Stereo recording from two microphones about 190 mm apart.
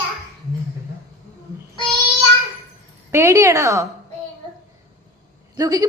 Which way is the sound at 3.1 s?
15° right (ahead or behind).